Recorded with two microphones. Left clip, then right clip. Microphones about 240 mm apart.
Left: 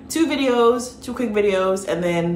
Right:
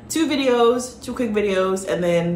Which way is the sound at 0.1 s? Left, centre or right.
Centre.